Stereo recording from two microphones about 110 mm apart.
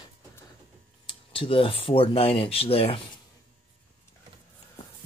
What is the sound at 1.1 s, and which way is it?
Speech, 55° left (ahead or behind).